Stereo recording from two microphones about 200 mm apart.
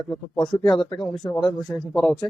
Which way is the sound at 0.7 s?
20° left (ahead or behind).